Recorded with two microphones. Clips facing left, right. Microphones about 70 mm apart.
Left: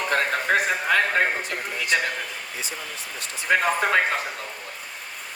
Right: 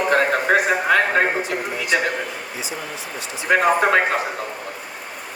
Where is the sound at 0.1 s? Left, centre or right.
Right.